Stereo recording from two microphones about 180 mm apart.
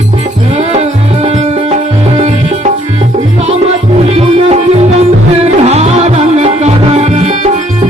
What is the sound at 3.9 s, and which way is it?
Music, 35° right (ahead or behind).